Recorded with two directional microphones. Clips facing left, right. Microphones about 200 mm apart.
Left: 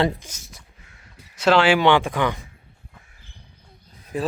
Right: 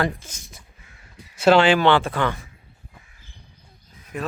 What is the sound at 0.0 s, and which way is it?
Speech, 25° left (ahead or behind).